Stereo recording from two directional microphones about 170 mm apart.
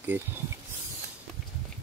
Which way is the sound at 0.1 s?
10° right (ahead or behind).